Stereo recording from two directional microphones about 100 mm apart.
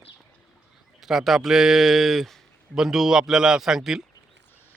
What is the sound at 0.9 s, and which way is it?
Speech, 5° right (ahead or behind).